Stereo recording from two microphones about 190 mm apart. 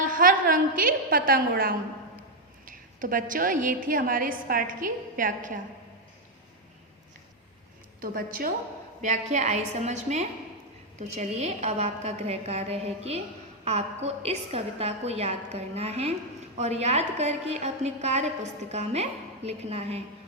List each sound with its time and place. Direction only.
0.0 s a woman's voice: 45° right (ahead or behind)
8.0 s a woman's voice: 50° right (ahead or behind)
9.0 s a woman's voice: 40° right (ahead or behind)